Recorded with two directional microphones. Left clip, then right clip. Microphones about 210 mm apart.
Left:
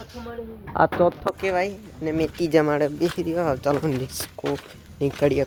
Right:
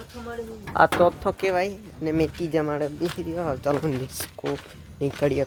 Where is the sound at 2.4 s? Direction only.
40° left (ahead or behind).